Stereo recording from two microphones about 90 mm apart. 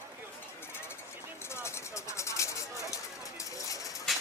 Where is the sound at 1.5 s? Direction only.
30° left (ahead or behind).